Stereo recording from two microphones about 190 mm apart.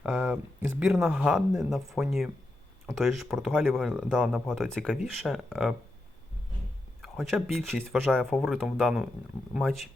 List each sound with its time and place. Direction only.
0.0 s speech: 10° right (ahead or behind)
7.0 s speech: centre (ahead or behind)